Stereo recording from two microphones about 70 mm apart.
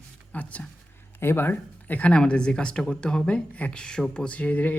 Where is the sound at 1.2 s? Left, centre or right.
Left.